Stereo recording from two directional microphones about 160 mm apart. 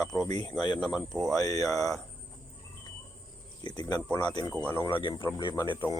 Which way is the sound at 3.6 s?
30° left (ahead or behind).